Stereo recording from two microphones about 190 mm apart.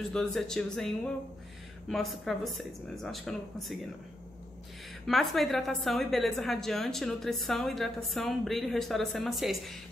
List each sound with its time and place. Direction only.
0.1 s a woman's voice: centre (ahead or behind)
5.0 s a woman's voice: centre (ahead or behind)